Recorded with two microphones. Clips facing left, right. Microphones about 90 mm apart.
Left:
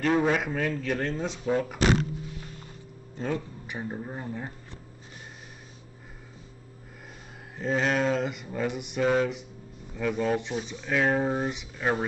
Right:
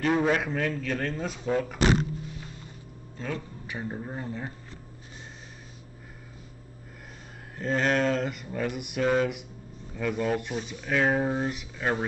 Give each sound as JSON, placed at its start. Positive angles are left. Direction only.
{"t": 0.0, "sound": "a man's voice", "side_deg": 0}
{"t": 1.0, "sound": "speech", "side_deg": 25}
{"t": 1.4, "sound": "speech", "side_deg": 5}
{"t": 3.2, "sound": "speech", "side_deg": 25}
{"t": 3.9, "sound": "speech", "side_deg": 0}
{"t": 4.2, "sound": "a man's voice", "side_deg": 10}
{"t": 7.5, "sound": "speech", "side_deg": 5}
{"t": 11.2, "sound": "a man's voice", "side_deg": 10}